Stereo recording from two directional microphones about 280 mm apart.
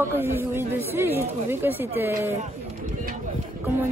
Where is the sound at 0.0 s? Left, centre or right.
Centre.